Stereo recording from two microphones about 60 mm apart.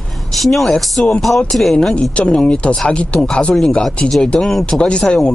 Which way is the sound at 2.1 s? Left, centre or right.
Centre.